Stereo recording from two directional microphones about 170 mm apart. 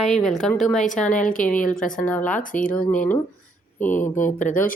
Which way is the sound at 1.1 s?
50° left (ahead or behind).